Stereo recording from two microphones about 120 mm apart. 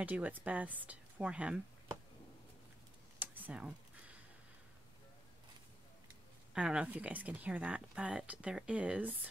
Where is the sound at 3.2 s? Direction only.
15° right (ahead or behind).